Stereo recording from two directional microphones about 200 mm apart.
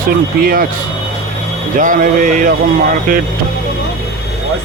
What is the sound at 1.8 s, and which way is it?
Speech, 40° right (ahead or behind).